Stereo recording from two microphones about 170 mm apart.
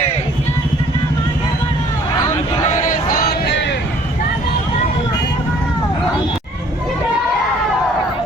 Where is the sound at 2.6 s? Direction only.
50° left (ahead or behind); by 3.8 s 90° left.